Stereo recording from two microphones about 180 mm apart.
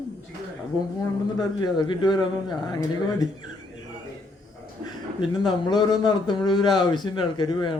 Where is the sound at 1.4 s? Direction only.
25° left (ahead or behind).